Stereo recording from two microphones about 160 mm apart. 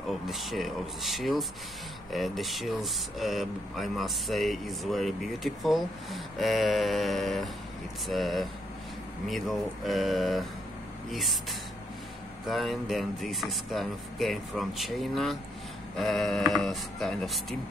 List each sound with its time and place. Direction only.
0.3 s speech: centre (ahead or behind)
12.4 s speech: centre (ahead or behind)